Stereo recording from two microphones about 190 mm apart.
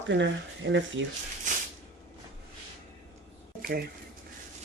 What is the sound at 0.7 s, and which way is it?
Speech, 80° right.